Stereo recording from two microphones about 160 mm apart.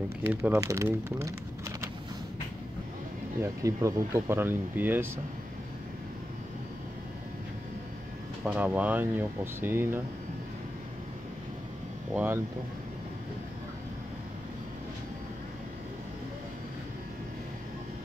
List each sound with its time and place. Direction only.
0.2 s speech: 10° right (ahead or behind)
3.3 s speech: 20° right (ahead or behind)
8.5 s speech: 10° right (ahead or behind)
12.1 s speech: 10° right (ahead or behind)